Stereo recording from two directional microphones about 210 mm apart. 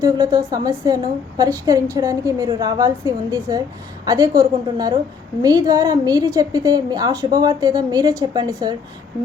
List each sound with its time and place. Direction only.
0.0 s a woman's voice: 15° right (ahead or behind)